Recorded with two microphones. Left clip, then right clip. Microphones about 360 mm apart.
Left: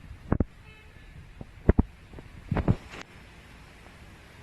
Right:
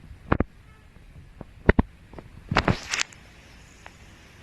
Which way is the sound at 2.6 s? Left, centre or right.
Right.